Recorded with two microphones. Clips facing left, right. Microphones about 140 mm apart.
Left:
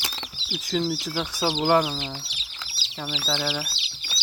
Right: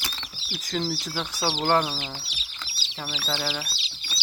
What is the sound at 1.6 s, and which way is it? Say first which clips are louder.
Speech: left 2 dB; 10° left (ahead or behind).